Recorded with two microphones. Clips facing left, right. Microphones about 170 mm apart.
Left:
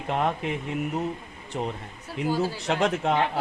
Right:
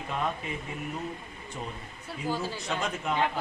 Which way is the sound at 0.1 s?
70° left (ahead or behind).